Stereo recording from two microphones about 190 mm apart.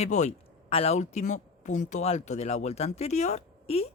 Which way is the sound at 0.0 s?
35° left (ahead or behind).